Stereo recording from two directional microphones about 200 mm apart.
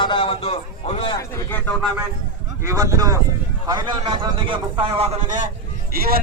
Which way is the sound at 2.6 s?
15° right (ahead or behind).